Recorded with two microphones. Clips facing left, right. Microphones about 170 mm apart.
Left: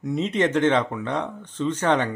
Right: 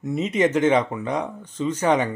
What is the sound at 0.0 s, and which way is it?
Speech, 5° right (ahead or behind).